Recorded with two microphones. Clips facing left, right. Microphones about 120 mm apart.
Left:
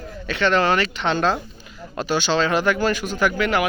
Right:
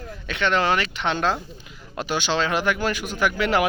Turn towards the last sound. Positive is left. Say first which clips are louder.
# even
turn(degrees=-30)  # may be behind; listen again after turning